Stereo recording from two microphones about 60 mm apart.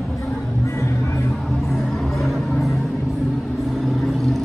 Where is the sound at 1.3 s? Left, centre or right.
Centre.